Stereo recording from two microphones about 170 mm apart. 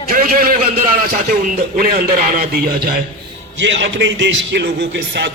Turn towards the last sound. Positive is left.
turn(degrees=-85)